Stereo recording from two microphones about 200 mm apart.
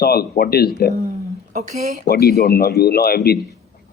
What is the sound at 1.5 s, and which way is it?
Speech, 40° right (ahead or behind).